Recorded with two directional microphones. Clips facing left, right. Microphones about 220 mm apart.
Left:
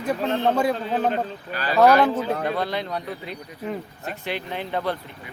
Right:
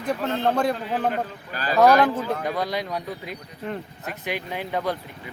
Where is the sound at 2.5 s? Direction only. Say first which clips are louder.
Left 1 dB; 10° right (ahead or behind).